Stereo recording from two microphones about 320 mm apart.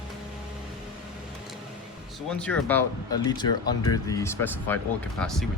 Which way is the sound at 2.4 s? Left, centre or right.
Centre.